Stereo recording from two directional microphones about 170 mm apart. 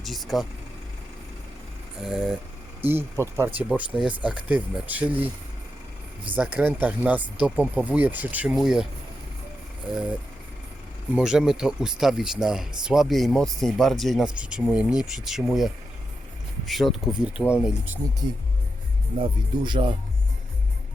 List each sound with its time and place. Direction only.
0.0 s vehicle: centre (ahead or behind)
2.0 s speech: 5° right (ahead or behind)
2.8 s speech: 15° right (ahead or behind)
6.3 s speech: 5° right (ahead or behind)
9.9 s speech: 5° right (ahead or behind)
19.2 s speech: 30° right (ahead or behind)